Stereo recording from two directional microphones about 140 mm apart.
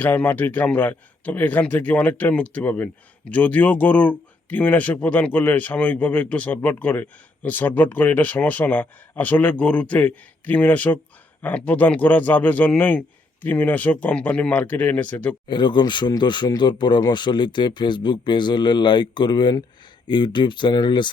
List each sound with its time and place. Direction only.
0.0 s a man's voice: 10° left (ahead or behind)
15.4 s speech: 35° left (ahead or behind)